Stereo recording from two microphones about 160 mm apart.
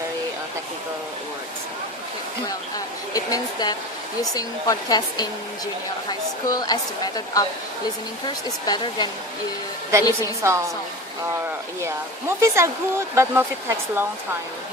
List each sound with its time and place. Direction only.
2.5 s a sound: 20° left (ahead or behind)
4.2 s a woman's voice: 25° left (ahead or behind)
8.6 s a woman's voice: 25° left (ahead or behind)
10.4 s speech: 20° right (ahead or behind)
12.4 s speech: 15° right (ahead or behind)